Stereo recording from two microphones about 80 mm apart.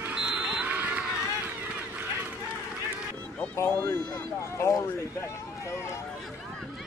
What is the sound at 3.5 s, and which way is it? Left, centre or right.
Speech, left.